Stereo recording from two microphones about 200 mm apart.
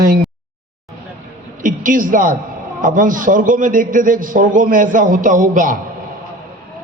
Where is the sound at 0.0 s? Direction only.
45° right (ahead or behind).